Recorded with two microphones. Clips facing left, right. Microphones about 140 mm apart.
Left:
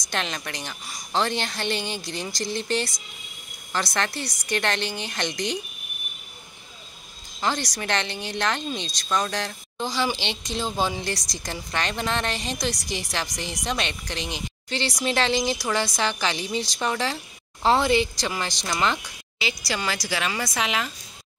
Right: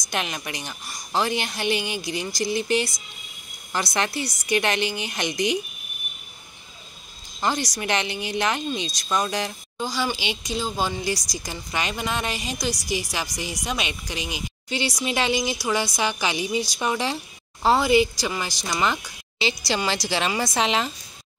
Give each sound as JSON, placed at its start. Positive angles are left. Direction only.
{"t": 0.1, "sound": "speech", "side_deg": -10}
{"t": 7.3, "sound": "speech", "side_deg": -10}
{"t": 19.3, "sound": "a woman's voice", "side_deg": -25}